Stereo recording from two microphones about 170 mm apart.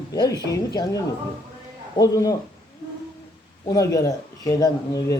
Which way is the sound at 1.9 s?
20° left (ahead or behind).